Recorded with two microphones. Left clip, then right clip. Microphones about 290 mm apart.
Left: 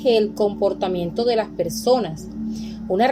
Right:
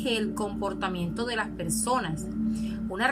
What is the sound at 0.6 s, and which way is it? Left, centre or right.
A woman's voice, centre.